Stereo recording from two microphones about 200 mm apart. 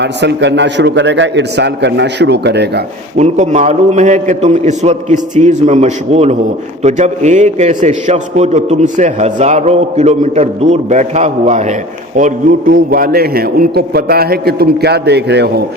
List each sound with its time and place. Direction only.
0.0 s a man's voice: 60° right (ahead or behind)
3.2 s a man's voice: 35° right (ahead or behind); by 15.6 s 55° right (ahead or behind)